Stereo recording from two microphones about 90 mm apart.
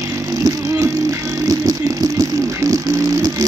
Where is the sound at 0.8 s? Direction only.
40° right (ahead or behind).